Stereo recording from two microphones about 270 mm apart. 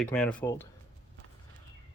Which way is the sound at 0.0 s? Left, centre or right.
Centre.